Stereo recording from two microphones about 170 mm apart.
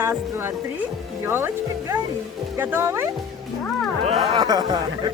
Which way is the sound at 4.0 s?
35° right (ahead or behind).